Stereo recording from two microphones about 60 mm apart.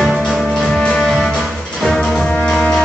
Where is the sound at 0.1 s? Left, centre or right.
Centre.